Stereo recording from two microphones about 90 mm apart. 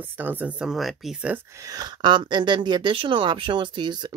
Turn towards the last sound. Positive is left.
turn(degrees=-55)  # may be behind; listen again after turning